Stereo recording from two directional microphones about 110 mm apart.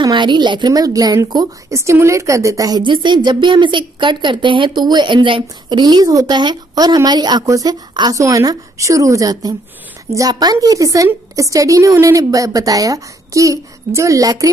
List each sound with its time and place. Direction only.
0.0 s a woman's voice: 45° right (ahead or behind)